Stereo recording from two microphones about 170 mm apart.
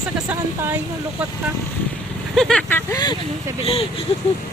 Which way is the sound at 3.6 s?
35° left (ahead or behind).